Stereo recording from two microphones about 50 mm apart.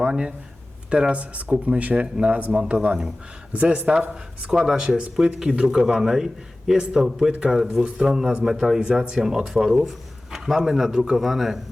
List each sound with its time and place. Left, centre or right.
0.0 s speech: centre
2.5 s a man's voice: centre
3.5 s speech: right
4.5 s a man's voice: centre